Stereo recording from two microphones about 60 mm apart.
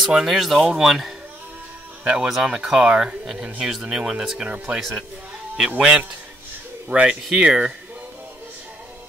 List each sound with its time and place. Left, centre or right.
0.0 s speech: centre